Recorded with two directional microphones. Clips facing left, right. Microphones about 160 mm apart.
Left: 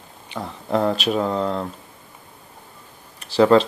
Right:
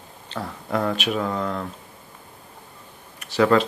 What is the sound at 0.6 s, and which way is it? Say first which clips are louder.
Speech: left 4 dB; 30° left (ahead or behind).